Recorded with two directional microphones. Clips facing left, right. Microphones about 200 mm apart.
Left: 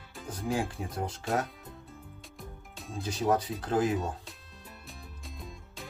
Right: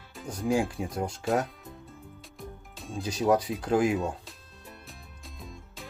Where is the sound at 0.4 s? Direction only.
15° right (ahead or behind).